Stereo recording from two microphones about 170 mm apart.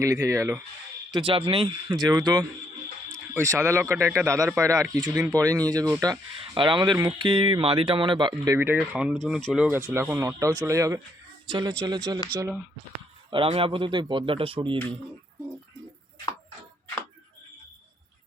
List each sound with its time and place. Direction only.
0.0 s speech: 20° right (ahead or behind)
1.1 s speech: 30° right (ahead or behind)
8.5 s speech: 15° right (ahead or behind)
9.1 s speech: 5° left (ahead or behind); by 12.2 s 25° right (ahead or behind)
13.3 s speech: 30° right (ahead or behind)